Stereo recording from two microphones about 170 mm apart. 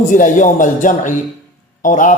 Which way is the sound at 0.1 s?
50° left (ahead or behind).